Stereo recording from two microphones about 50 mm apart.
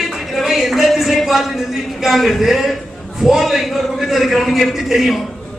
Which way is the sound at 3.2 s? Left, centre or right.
Centre.